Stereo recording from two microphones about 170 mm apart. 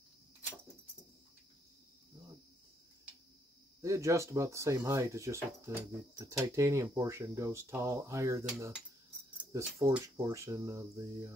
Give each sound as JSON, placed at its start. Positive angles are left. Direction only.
{"t": 3.8, "sound": "speech", "side_deg": -20}
{"t": 9.5, "sound": "speech", "side_deg": -20}